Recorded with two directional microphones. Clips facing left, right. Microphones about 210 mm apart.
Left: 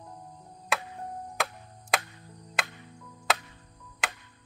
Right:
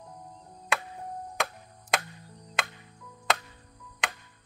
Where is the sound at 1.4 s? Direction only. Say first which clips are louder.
Even; centre (ahead or behind).